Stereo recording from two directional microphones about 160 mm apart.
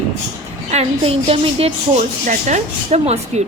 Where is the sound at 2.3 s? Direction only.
45° right (ahead or behind).